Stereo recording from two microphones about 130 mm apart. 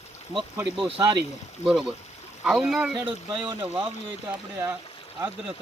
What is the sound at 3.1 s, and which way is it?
Speech, 40° right (ahead or behind).